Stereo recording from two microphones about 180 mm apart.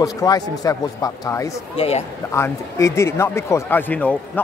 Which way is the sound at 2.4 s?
15° left (ahead or behind).